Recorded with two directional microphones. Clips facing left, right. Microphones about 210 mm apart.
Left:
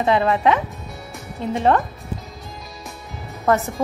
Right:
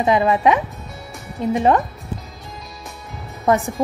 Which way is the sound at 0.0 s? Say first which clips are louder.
Right 2 dB; 15° right (ahead or behind).